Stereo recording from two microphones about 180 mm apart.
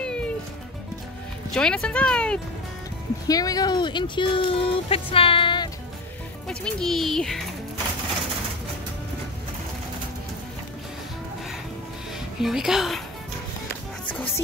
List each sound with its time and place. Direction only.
0.0 s music: 5° left (ahead or behind)
1.5 s a child's voice: 5° left (ahead or behind)
3.3 s speech: 20° left (ahead or behind)
6.4 s a child's voice: 5° left (ahead or behind)
12.4 s a child's voice: centre (ahead or behind)